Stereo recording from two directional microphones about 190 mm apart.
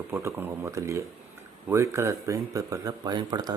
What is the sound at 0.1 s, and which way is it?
Speech, 15° right (ahead or behind).